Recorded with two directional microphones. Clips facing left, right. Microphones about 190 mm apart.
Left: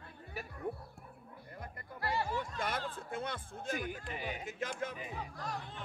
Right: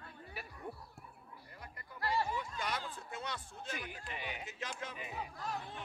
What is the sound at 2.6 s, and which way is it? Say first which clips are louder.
Speech: left 3 dB; 50° left (ahead or behind).